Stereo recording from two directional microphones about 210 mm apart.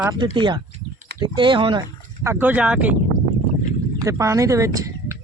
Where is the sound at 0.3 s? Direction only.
20° right (ahead or behind); by 3.0 s 5° right (ahead or behind).